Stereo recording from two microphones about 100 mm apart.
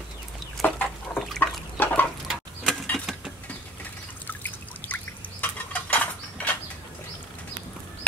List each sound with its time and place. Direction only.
0.6 s chicken: 15° left (ahead or behind)
1.4 s water: 20° left (ahead or behind)
2.2 s a sound: 5° left (ahead or behind)
4.3 s water: 20° left (ahead or behind)